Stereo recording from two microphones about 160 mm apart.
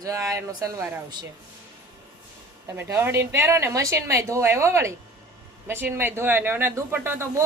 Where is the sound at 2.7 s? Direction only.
15° right (ahead or behind).